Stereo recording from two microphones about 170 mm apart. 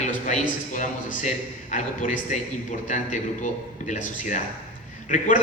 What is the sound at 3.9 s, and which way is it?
Speech, 45° left (ahead or behind).